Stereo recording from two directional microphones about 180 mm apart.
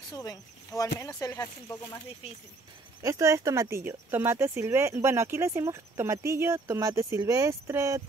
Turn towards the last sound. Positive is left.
turn(degrees=-15)  # may be behind; listen again after turning